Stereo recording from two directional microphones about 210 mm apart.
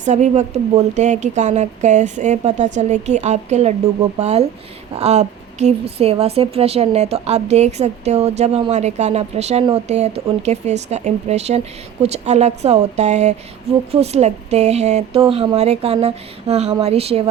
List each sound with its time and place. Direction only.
0.0 s a woman's voice: 35° right (ahead or behind)